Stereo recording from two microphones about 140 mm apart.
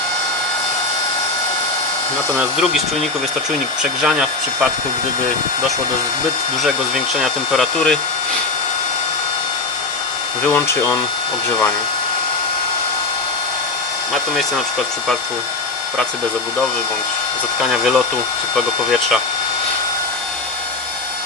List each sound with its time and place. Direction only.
2.4 s speech: centre (ahead or behind)
6.6 s speech: 5° right (ahead or behind)
10.4 s speech: 15° left (ahead or behind)
17.6 s speech: centre (ahead or behind)